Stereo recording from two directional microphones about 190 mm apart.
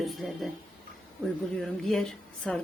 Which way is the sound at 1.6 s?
5° left (ahead or behind).